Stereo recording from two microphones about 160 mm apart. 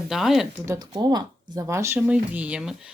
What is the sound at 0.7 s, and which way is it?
Speech, 20° right (ahead or behind).